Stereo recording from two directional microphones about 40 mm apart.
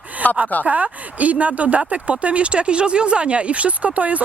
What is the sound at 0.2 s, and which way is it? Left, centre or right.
Speech, left.